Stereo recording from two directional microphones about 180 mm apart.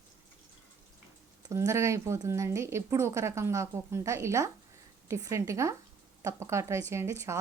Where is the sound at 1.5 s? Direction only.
15° right (ahead or behind).